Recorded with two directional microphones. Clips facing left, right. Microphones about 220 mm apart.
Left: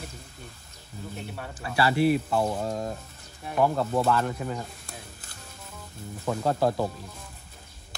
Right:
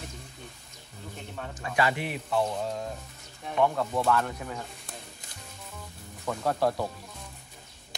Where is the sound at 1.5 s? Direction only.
35° left (ahead or behind).